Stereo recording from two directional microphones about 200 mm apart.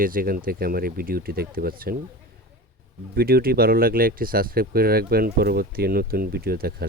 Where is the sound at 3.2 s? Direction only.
50° right (ahead or behind).